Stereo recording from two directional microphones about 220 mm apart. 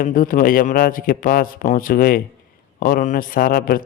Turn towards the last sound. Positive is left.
turn(degrees=40)  # may be behind; listen again after turning